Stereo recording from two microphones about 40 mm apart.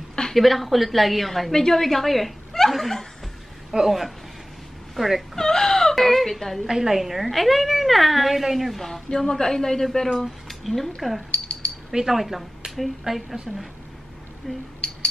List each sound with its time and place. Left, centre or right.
0.3 s a woman's voice: centre
1.5 s speech: centre
3.7 s a woman's voice: centre
5.3 s speech: centre
6.7 s a woman's voice: centre
10.2 s a woman's voice: centre
11.3 s a sound: left
11.9 s a woman's voice: centre
14.8 s a sound: centre